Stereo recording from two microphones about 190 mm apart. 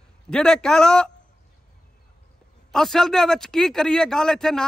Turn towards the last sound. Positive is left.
turn(degrees=5)  # may be behind; listen again after turning